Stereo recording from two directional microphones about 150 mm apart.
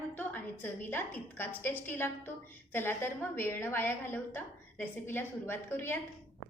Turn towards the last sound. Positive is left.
turn(degrees=15)  # may be behind; listen again after turning